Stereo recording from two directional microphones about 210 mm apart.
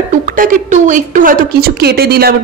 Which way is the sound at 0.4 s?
40° right (ahead or behind).